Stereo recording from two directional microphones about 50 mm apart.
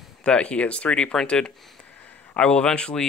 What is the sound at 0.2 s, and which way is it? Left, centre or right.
Speech, centre.